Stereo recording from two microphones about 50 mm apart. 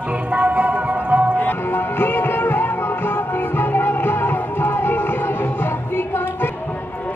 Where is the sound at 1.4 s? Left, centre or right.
Left.